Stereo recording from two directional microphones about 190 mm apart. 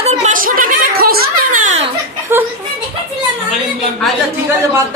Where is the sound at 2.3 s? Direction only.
15° right (ahead or behind).